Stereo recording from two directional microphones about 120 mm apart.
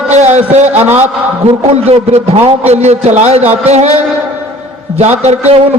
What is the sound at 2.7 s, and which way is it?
A man's voice, 65° right (ahead or behind).